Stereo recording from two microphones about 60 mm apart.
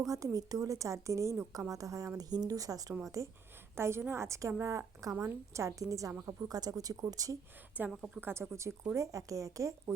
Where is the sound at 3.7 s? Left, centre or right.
Right.